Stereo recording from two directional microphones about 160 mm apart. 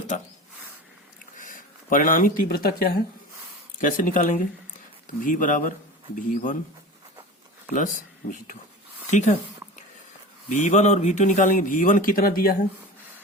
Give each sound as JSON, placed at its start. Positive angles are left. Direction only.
{"t": 0.1, "sound": "speech", "side_deg": 50}
{"t": 1.4, "sound": "speech", "side_deg": 55}
{"t": 7.7, "sound": "speech", "side_deg": 55}
{"t": 10.5, "sound": "speech", "side_deg": 50}